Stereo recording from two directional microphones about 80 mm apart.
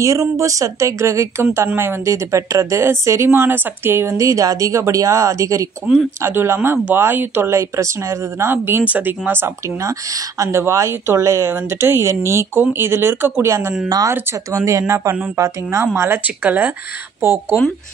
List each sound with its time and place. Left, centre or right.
0.0 s speech: right
4.2 s speech: right
9.8 s speech: right
13.8 s speech: right
14.5 s speech: right